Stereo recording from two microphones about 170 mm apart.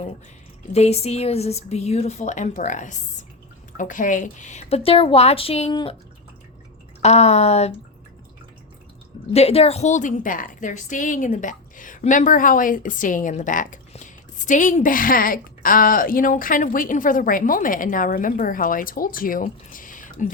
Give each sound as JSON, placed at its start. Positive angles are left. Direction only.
{"t": 0.7, "sound": "speech", "side_deg": 40}
{"t": 7.0, "sound": "speech", "side_deg": 40}
{"t": 9.3, "sound": "a woman's voice", "side_deg": 35}